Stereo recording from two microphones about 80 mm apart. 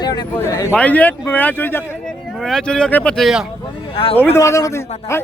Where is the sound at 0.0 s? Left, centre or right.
Left.